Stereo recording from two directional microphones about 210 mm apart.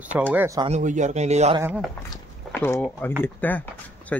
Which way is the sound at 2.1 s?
10° left (ahead or behind).